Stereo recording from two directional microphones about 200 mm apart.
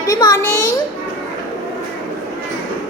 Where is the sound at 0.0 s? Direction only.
15° left (ahead or behind).